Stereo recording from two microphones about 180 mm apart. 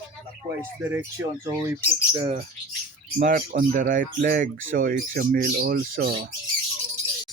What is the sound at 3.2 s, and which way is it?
Speech, 50° right (ahead or behind).